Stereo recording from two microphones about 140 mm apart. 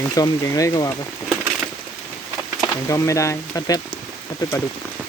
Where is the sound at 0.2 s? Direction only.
25° left (ahead or behind).